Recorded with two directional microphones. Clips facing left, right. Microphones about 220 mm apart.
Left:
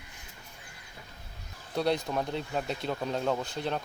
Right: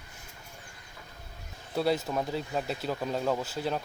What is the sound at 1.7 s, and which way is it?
Speech, 5° right (ahead or behind).